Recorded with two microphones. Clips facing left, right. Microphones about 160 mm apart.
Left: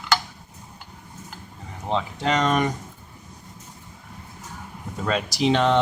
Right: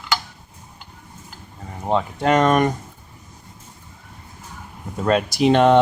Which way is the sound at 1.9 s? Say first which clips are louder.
Right 5 dB; 50° right (ahead or behind).